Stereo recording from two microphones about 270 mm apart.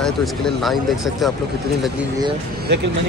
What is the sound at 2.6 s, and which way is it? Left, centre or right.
Speech, right.